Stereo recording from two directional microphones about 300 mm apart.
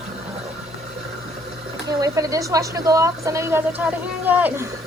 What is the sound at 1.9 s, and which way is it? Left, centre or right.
Speech, centre.